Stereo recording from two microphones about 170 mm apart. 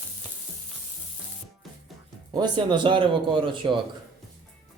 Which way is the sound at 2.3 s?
25° right (ahead or behind).